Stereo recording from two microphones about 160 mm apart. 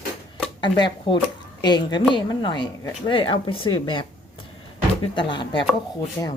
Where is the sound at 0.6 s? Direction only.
30° left (ahead or behind).